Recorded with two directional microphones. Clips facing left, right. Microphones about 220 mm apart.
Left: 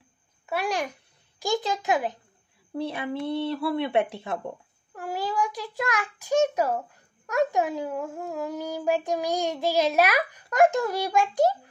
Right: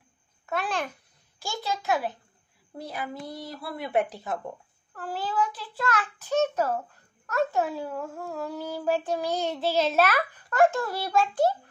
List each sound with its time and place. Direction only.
0.5 s a child's voice: 10° left (ahead or behind)
2.8 s speech: 25° left (ahead or behind)
4.9 s a child's voice: 15° left (ahead or behind)